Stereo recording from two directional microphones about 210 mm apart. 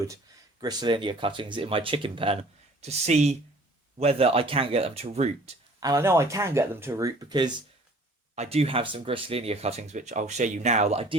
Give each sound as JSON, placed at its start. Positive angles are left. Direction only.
{"t": 0.6, "sound": "speech", "side_deg": -20}
{"t": 5.8, "sound": "speech", "side_deg": -15}